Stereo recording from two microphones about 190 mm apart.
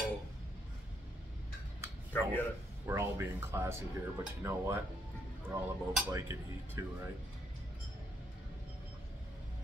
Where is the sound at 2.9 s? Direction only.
15° right (ahead or behind).